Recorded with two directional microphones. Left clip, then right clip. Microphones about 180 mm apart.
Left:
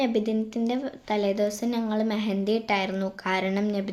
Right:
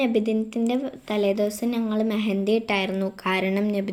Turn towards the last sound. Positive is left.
turn(degrees=-5)  # may be behind; listen again after turning